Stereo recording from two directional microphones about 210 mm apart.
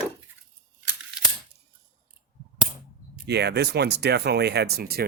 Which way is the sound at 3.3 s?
50° right (ahead or behind).